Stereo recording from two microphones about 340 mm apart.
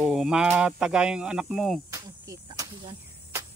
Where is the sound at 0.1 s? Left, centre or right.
Centre.